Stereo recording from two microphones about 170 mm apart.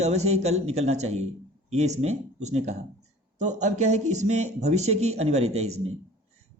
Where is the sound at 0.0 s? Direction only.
40° right (ahead or behind).